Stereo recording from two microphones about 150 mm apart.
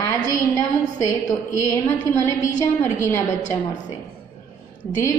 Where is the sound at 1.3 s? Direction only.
20° left (ahead or behind).